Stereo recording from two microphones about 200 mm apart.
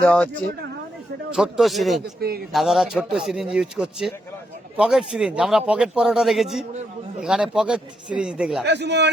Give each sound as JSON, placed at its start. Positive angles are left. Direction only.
{"t": 0.0, "sound": "a man's voice", "side_deg": 5}
{"t": 1.3, "sound": "a man's voice", "side_deg": 0}
{"t": 8.6, "sound": "speech", "side_deg": -60}